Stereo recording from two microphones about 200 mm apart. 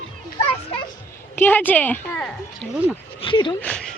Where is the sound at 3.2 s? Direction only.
25° left (ahead or behind).